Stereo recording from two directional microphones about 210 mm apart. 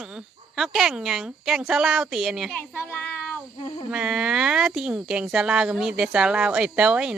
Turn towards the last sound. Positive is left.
turn(degrees=-5)  # may be behind; listen again after turning